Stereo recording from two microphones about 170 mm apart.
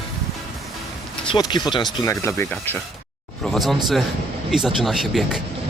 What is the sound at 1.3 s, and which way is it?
Speech, 25° left (ahead or behind).